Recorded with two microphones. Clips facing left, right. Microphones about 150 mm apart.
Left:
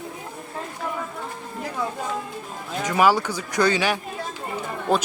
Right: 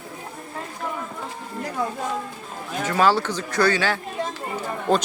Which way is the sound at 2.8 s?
10° left (ahead or behind).